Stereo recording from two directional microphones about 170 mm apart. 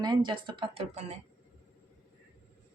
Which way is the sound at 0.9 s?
40° right (ahead or behind).